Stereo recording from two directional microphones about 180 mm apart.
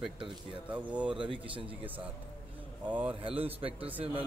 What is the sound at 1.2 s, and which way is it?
Speech, 30° right (ahead or behind).